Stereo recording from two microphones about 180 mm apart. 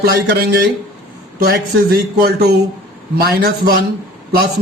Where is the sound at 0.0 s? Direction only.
55° right (ahead or behind).